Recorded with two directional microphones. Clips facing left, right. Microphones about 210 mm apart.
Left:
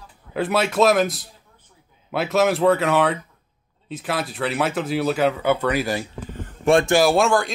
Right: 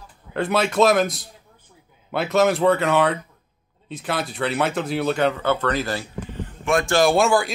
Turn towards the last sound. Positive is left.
turn(degrees=-5)  # may be behind; listen again after turning